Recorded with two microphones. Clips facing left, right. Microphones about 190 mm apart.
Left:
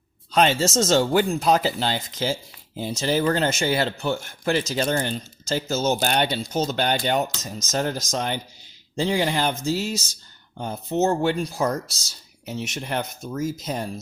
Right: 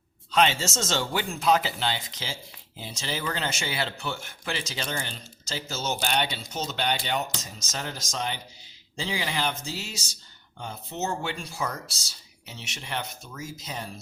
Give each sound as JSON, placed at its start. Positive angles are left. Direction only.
{"t": 0.3, "sound": "speech", "side_deg": 40}
{"t": 10.6, "sound": "speech", "side_deg": 40}